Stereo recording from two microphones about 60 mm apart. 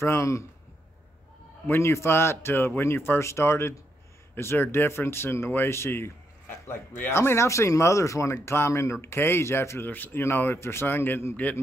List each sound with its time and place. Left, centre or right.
0.0 s speech: left
1.7 s speech: left